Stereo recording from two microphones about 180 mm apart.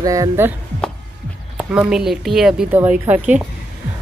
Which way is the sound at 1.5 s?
5° right (ahead or behind).